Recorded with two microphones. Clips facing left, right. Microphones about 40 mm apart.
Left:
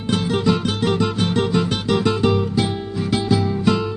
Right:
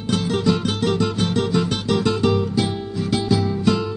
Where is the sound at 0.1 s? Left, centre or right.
Centre.